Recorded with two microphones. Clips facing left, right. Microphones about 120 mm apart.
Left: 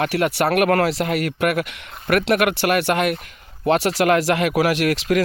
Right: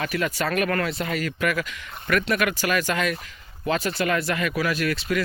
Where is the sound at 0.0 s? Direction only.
70° left (ahead or behind).